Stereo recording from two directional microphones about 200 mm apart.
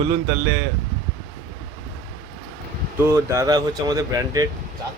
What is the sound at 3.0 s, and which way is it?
Speech, 15° right (ahead or behind).